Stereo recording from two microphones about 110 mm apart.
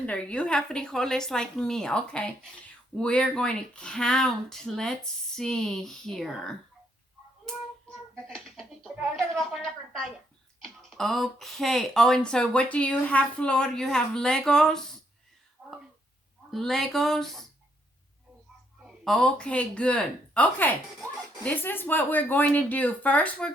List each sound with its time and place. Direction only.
0.0 s speech: 10° left (ahead or behind)
7.5 s a sound: 5° left (ahead or behind)
10.8 s speech: 5° left (ahead or behind)
15.6 s a sound: 15° right (ahead or behind)
16.5 s speech: centre (ahead or behind)
18.8 s speech: centre (ahead or behind)